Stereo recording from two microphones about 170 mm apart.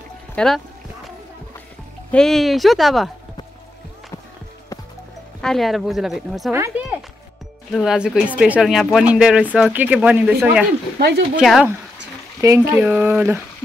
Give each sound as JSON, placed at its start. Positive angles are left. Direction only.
{"t": 0.4, "sound": "speech", "side_deg": 5}
{"t": 2.0, "sound": "speech", "side_deg": 5}
{"t": 5.4, "sound": "speech", "side_deg": 0}
{"t": 6.5, "sound": "a sound", "side_deg": -15}
{"t": 7.7, "sound": "speech", "side_deg": 0}
{"t": 11.0, "sound": "speech", "side_deg": -75}
{"t": 11.3, "sound": "speech", "side_deg": -5}
{"t": 12.4, "sound": "speech", "side_deg": -20}